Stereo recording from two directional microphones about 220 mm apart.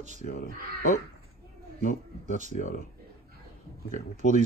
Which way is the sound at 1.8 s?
35° left (ahead or behind).